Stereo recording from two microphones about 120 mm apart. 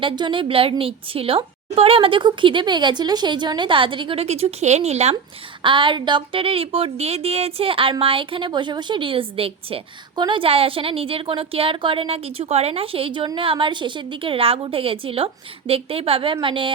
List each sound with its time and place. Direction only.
0.0 s a woman's voice: 45° right (ahead or behind); by 5.1 s 65° right (ahead or behind)
5.6 s a woman's voice: 45° right (ahead or behind)